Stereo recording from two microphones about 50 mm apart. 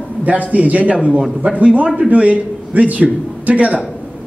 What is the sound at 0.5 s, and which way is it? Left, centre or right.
A man's voice, right.